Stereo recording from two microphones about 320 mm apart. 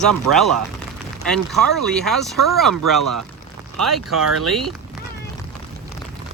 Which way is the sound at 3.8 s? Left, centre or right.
Right.